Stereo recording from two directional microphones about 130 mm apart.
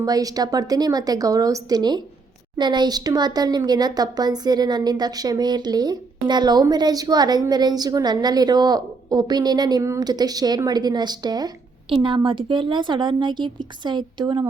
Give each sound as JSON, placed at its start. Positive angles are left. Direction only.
{"t": 0.0, "sound": "a woman's voice", "side_deg": -30}